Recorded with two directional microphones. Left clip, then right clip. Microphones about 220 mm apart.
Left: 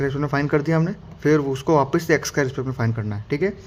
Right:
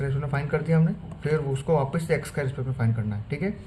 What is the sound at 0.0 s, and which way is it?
A man's voice, 45° left (ahead or behind).